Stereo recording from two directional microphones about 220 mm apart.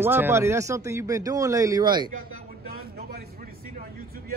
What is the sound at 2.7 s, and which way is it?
Vehicle, 45° right (ahead or behind).